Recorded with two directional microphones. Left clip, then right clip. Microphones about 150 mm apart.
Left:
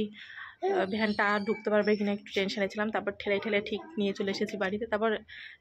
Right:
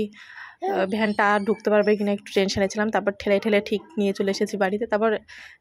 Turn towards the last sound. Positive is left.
turn(degrees=-45)  # may be behind; listen again after turning